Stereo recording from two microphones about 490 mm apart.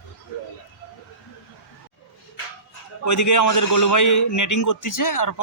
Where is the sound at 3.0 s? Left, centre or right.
Left.